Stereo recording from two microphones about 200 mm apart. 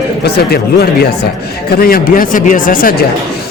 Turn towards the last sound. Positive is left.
turn(degrees=45)  # may be behind; listen again after turning